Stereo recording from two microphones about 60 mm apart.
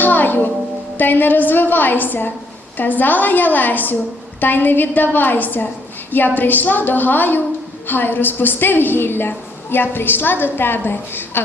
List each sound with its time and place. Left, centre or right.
0.0 s music: left
0.9 s a woman's voice: left